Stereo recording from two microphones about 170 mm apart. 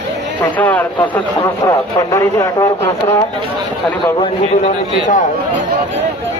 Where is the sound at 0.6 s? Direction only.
10° left (ahead or behind).